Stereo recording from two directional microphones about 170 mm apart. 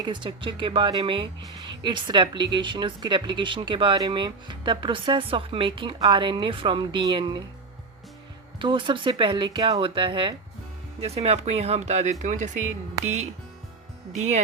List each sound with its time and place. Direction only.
0.0 s speech: 30° right (ahead or behind)
8.5 s speech: 30° right (ahead or behind); by 12.6 s 45° right (ahead or behind)
13.0 s speech: 20° right (ahead or behind)